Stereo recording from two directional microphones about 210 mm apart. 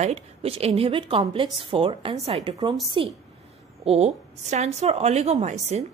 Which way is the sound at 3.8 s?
30° right (ahead or behind).